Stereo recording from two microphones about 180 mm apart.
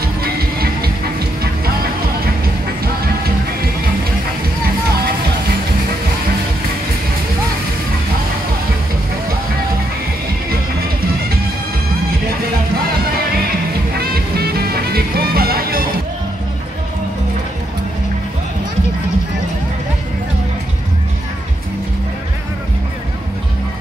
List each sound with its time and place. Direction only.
0.0 s music: 55° right (ahead or behind)
13.9 s music: 60° right (ahead or behind)